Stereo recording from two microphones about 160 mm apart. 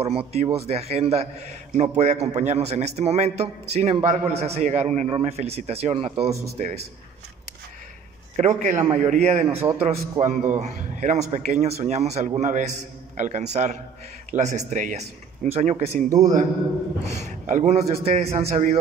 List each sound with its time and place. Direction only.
0.0 s a man's voice: 40° right (ahead or behind)
6.6 s a man's voice: 50° right (ahead or behind)
8.4 s a man's voice: 50° right (ahead or behind)
8.8 s a man's voice: 40° right (ahead or behind)
9.5 s a man's voice: 15° right (ahead or behind)
9.8 s a man's voice: 40° right (ahead or behind)
16.1 s speech: 20° right (ahead or behind)
17.2 s a man's voice: 45° right (ahead or behind)